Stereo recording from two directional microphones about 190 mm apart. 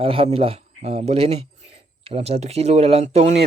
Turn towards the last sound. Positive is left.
turn(degrees=-35)  # may be behind; listen again after turning